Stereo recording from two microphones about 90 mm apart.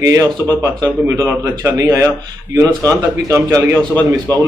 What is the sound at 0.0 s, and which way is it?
A man's voice, 35° right (ahead or behind).